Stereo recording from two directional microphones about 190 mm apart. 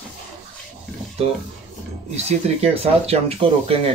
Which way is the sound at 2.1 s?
35° right (ahead or behind).